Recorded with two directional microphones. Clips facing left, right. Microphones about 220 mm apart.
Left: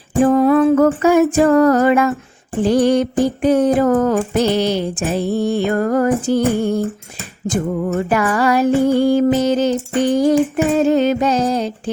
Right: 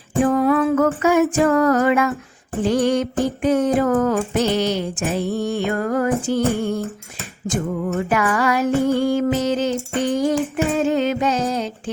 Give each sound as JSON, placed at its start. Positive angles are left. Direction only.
{"t": 0.2, "sound": "music", "side_deg": 30}